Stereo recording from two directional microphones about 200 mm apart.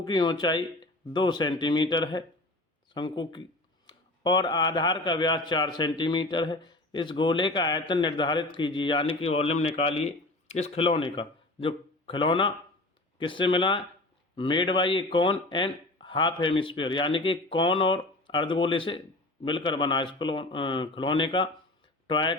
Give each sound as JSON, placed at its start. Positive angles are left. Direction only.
{"t": 0.0, "sound": "speech", "side_deg": 20}